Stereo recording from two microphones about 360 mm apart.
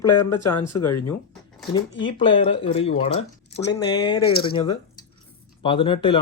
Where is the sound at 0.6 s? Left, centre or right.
Centre.